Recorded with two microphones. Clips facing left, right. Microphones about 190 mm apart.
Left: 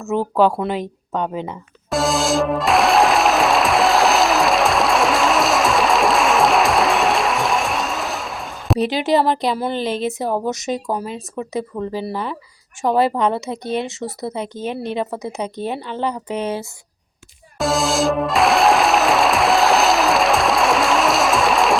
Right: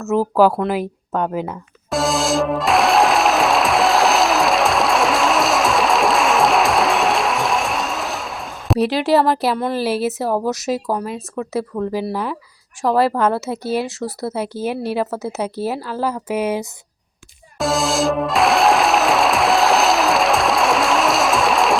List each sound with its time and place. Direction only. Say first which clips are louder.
0.1 s speech: right 2 dB; 5° right (ahead or behind)
0.6 s music: right 2 dB; 5° right (ahead or behind)
12.0 s speech: right 2 dB; 10° right (ahead or behind)
17.6 s music: even; centre (ahead or behind)